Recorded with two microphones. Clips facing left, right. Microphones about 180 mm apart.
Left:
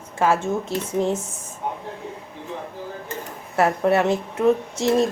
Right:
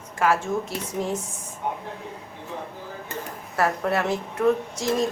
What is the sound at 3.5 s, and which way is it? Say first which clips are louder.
Speech: left 5 dB; 25° left (ahead or behind).